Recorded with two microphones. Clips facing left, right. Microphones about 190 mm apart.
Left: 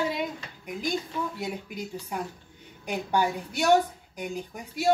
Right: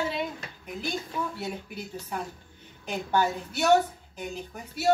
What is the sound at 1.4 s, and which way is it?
A woman's voice, 15° left (ahead or behind).